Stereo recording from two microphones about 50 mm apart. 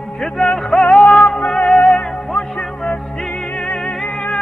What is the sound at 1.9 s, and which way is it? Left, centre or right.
Music, centre.